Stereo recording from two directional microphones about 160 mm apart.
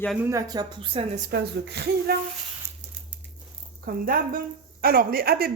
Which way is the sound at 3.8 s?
60° right (ahead or behind).